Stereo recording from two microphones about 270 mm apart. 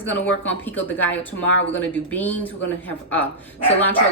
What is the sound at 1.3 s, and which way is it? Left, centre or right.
Speech, left.